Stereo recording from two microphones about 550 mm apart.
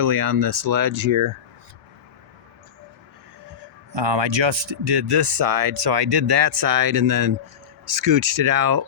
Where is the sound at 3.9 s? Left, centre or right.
Right.